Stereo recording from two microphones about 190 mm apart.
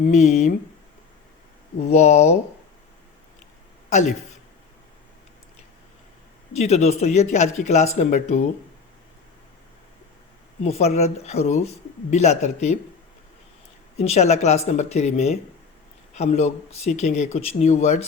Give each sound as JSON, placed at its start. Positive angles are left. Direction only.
{"t": 0.1, "sound": "speech", "side_deg": 35}
{"t": 1.9, "sound": "speech", "side_deg": 35}
{"t": 6.5, "sound": "speech", "side_deg": 35}
{"t": 10.6, "sound": "speech", "side_deg": 35}
{"t": 14.0, "sound": "speech", "side_deg": 35}